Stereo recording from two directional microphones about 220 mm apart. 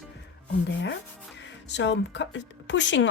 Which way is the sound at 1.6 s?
55° left (ahead or behind).